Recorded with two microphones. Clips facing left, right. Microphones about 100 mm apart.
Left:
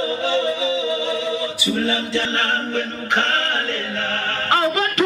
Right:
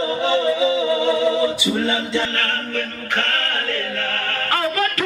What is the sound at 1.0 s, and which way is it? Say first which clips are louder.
A capella: right 6 dB; 15° right (ahead or behind).